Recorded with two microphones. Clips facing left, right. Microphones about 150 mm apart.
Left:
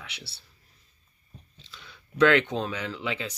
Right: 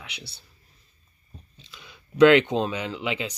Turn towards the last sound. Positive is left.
turn(degrees=-20)  # may be behind; listen again after turning